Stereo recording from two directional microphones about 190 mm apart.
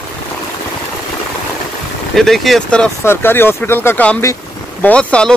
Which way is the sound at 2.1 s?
Centre (ahead or behind).